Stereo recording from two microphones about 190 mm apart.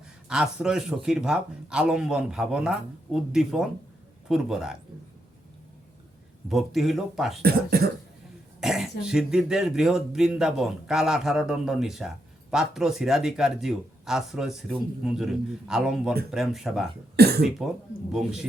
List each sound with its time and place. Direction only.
0.3 s speech: 5° right (ahead or behind)
6.5 s speech: centre (ahead or behind)
7.4 s speech: 55° right (ahead or behind)
8.6 s speech: centre (ahead or behind)
17.2 s speech: 55° right (ahead or behind)
18.1 s speech: 5° right (ahead or behind)